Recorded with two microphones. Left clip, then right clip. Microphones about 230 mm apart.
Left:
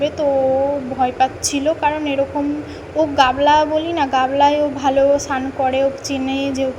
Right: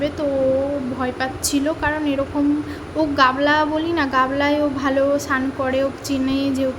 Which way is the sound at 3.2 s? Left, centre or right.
Centre.